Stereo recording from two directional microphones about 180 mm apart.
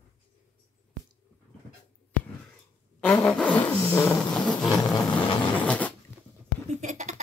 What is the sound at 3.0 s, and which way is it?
Vehicle, 5° left (ahead or behind).